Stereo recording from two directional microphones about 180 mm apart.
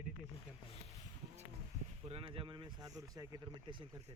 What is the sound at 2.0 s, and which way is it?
Speech, 30° right (ahead or behind).